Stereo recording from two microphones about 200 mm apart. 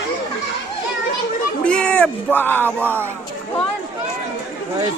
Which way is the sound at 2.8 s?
10° right (ahead or behind).